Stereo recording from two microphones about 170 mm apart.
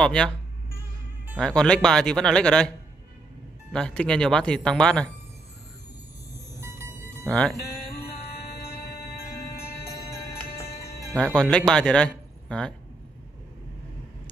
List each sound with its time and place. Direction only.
0.0 s speech: 5° left (ahead or behind)
1.4 s speech: 5° left (ahead or behind)
3.7 s speech: 5° left (ahead or behind)
6.3 s music: 15° right (ahead or behind)
7.2 s speech: 5° left (ahead or behind)
7.6 s music: 65° left (ahead or behind)
11.1 s speech: 5° left (ahead or behind)